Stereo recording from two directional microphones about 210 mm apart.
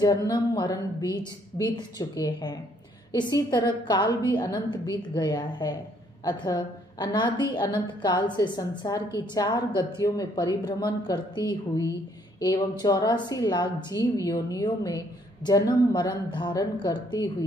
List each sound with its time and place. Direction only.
0.0 s a woman's voice: 20° left (ahead or behind)